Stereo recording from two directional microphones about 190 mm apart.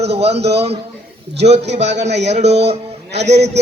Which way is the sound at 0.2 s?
35° right (ahead or behind).